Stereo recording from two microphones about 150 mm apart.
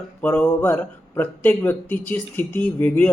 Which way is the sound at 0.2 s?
10° left (ahead or behind).